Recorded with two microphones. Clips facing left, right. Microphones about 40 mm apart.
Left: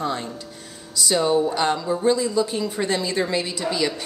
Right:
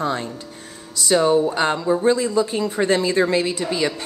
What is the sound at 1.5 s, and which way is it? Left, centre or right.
A woman's voice, right.